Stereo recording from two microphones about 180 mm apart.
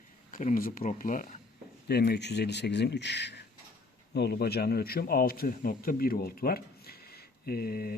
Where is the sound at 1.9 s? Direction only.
65° left (ahead or behind).